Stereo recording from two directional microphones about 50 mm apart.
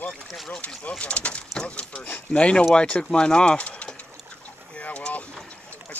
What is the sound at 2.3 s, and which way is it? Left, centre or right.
Speech, left.